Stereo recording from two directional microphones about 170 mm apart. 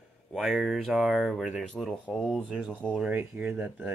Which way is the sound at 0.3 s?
Centre (ahead or behind).